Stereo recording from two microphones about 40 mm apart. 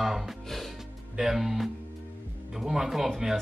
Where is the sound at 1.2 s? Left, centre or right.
Centre.